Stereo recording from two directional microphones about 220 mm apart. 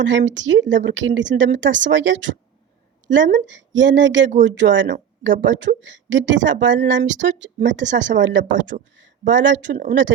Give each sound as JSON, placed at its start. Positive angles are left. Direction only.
{"t": 0.0, "sound": "a woman's voice", "side_deg": -55}
{"t": 3.4, "sound": "a woman's voice", "side_deg": -55}